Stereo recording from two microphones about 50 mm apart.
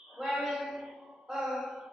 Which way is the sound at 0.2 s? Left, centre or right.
Centre.